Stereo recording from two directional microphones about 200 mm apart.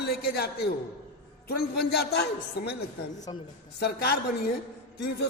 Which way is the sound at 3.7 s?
55° left (ahead or behind).